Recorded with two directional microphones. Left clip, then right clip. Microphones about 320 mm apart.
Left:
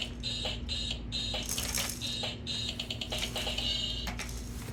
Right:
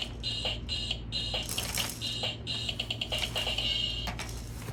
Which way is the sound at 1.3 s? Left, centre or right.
Centre.